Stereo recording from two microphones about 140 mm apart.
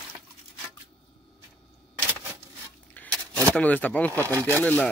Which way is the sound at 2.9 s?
10° left (ahead or behind).